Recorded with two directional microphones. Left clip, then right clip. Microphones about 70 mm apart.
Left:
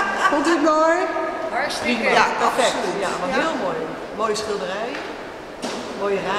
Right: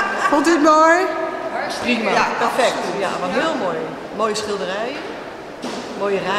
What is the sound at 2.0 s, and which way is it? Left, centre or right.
Speech, centre.